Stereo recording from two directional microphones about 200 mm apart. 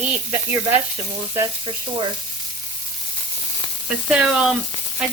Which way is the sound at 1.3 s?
20° right (ahead or behind).